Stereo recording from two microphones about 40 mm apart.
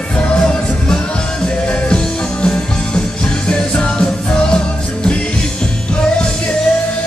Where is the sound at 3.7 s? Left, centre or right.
Left.